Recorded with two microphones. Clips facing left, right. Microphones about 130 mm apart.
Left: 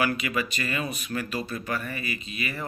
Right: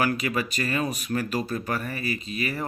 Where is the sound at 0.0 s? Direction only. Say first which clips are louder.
Right 1 dB; 40° right (ahead or behind).